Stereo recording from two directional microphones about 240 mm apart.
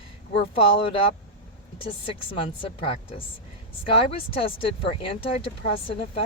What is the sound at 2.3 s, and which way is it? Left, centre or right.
Speech, left.